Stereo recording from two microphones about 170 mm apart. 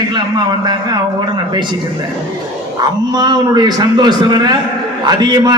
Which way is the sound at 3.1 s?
25° right (ahead or behind).